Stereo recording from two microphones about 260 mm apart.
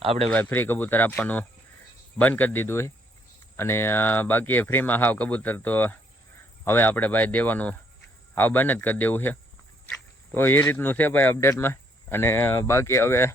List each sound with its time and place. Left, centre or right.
0.0 s speech: right
0.3 s speech: centre